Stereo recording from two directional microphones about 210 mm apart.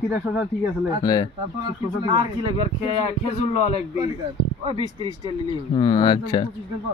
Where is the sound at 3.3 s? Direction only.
30° left (ahead or behind).